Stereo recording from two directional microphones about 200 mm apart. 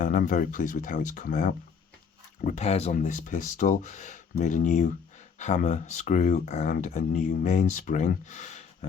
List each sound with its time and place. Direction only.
0.0 s speech: 40° left (ahead or behind)